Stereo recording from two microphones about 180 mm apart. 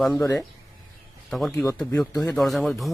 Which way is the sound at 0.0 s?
Centre (ahead or behind).